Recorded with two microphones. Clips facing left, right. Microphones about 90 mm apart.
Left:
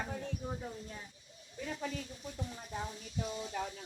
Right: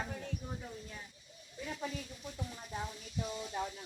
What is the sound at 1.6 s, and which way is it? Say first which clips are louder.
Speech: left 1 dB; 40° left (ahead or behind).